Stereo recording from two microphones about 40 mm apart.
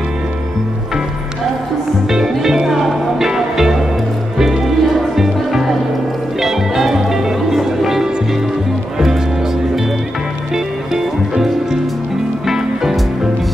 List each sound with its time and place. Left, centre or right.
2.0 s music: centre